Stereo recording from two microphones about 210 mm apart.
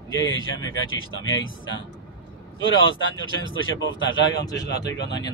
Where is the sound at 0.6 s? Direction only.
70° left (ahead or behind).